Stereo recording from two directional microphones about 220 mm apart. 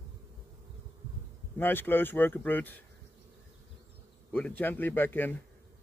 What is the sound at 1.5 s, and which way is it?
Speech, 10° left (ahead or behind).